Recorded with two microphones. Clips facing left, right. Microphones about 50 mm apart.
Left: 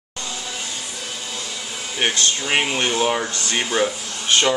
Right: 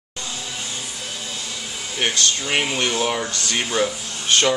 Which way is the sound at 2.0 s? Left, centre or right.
Left.